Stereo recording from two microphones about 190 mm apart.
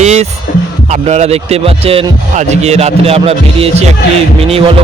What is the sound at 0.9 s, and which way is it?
Speech, 35° right (ahead or behind).